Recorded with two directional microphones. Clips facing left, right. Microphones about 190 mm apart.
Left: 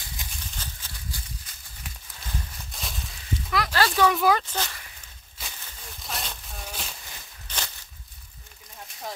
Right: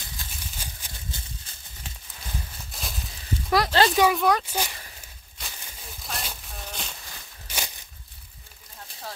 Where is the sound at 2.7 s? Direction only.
Centre (ahead or behind).